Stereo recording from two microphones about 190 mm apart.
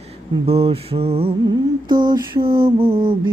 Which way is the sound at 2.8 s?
30° right (ahead or behind).